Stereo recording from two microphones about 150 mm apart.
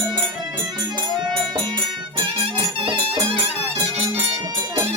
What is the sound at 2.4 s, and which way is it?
Music, 35° right (ahead or behind).